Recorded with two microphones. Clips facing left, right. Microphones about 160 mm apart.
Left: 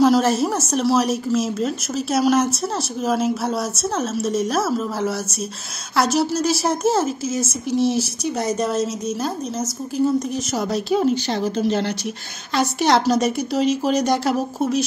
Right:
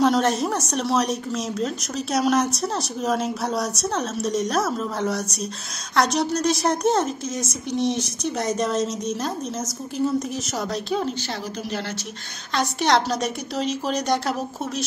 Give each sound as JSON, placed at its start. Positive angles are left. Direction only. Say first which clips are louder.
{"t": 0.0, "sound": "speech", "louder": "left 4 dB", "side_deg": 5}
{"t": 11.6, "sound": "speech", "louder": "left 9 dB", "side_deg": 25}
{"t": 12.5, "sound": "speech", "louder": "left 3 dB", "side_deg": 5}